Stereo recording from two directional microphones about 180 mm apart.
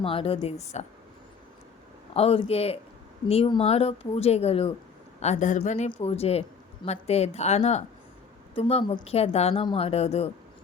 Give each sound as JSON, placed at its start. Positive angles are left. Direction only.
{"t": 0.0, "sound": "a woman's voice", "side_deg": 30}
{"t": 2.1, "sound": "a woman's voice", "side_deg": 35}